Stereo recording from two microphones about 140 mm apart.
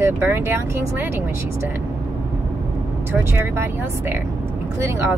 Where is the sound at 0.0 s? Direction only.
15° right (ahead or behind).